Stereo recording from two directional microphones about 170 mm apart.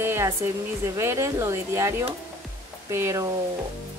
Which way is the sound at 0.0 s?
15° right (ahead or behind).